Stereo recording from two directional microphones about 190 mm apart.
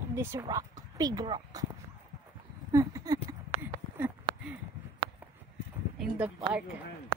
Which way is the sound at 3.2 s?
10° right (ahead or behind).